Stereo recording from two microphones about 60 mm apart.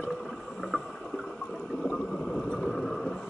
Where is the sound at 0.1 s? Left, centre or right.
Centre.